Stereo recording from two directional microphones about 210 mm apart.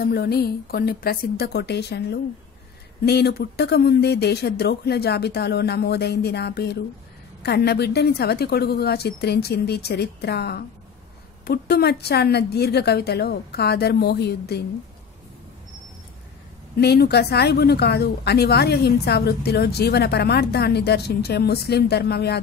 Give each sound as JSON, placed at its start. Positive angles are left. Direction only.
{"t": 0.0, "sound": "a woman's voice", "side_deg": 45}
{"t": 16.7, "sound": "a woman's voice", "side_deg": 50}